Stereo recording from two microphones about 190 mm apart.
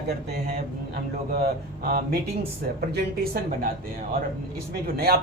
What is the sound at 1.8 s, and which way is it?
Speech, 50° right (ahead or behind).